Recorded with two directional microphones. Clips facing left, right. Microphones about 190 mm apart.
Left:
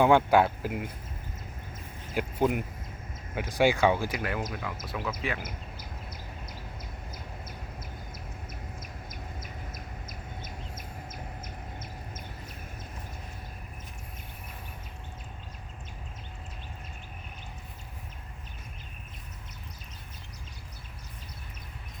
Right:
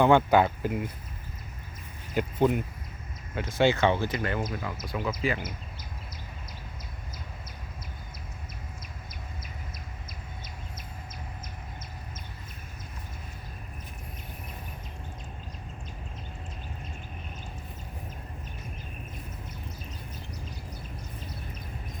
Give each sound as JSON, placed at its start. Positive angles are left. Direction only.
{"t": 0.0, "sound": "speech", "side_deg": 5}
{"t": 2.1, "sound": "speech", "side_deg": 10}